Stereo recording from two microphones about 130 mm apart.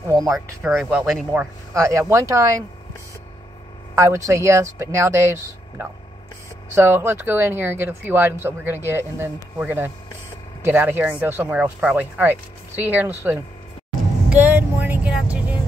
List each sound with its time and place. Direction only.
0.1 s speech: 30° right (ahead or behind)
0.7 s speech: 5° right (ahead or behind)
1.8 s speech: 25° right (ahead or behind)
3.9 s speech: 20° right (ahead or behind)
14.3 s vehicle: 15° right (ahead or behind)